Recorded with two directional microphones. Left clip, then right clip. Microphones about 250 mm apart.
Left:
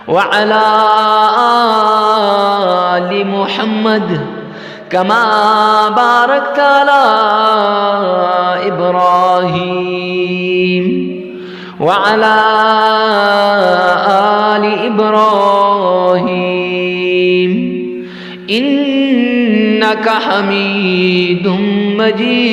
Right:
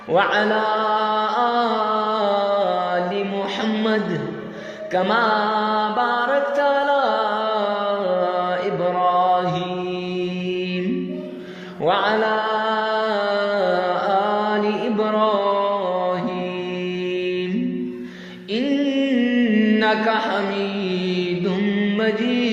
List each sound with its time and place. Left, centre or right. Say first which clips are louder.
0.1 s mantra: left 8 dB; left
4.9 s mantra: left 8 dB; left
11.9 s mantra: left 9 dB; left
17.1 s music: left 14 dB; left
18.5 s music: left 8 dB; left